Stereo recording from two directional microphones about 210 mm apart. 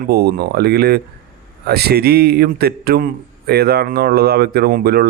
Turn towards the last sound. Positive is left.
turn(degrees=-45)  # may be behind; listen again after turning